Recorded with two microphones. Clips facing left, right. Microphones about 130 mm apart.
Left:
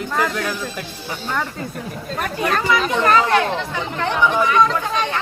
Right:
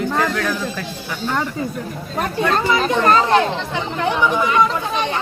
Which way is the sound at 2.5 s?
30° right (ahead or behind).